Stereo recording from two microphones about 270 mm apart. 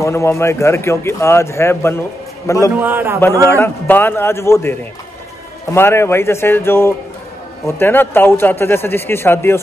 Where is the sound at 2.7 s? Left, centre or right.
Centre.